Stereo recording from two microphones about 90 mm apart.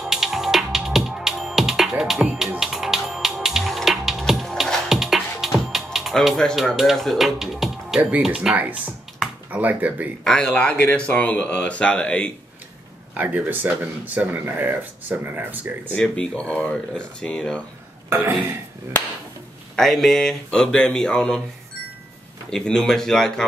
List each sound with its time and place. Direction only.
0.0 s music: 5° right (ahead or behind)
5.9 s speech: centre (ahead or behind)
10.2 s speech: 5° left (ahead or behind)
13.1 s speech: 20° right (ahead or behind)
15.9 s speech: 10° left (ahead or behind)
18.1 s speech: 25° right (ahead or behind)
19.7 s speech: 5° left (ahead or behind)
22.5 s speech: 5° left (ahead or behind)